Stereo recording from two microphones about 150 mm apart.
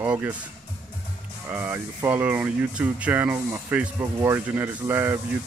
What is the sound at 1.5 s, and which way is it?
Speech, 15° right (ahead or behind).